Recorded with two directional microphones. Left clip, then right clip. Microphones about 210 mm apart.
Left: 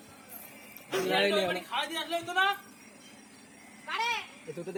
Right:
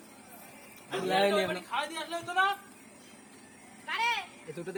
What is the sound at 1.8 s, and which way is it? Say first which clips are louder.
Speech: left 2 dB; 45° left (ahead or behind).